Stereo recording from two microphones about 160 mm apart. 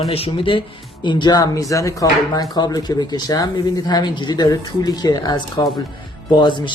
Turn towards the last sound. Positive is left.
turn(degrees=30)  # may be behind; listen again after turning